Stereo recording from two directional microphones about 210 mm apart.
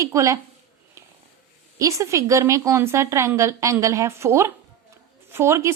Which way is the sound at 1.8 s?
15° right (ahead or behind).